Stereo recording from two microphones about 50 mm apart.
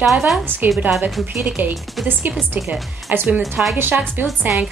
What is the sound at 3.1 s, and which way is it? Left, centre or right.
A woman's voice, right.